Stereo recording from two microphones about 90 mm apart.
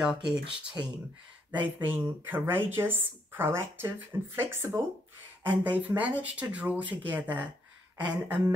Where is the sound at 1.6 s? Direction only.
20° right (ahead or behind).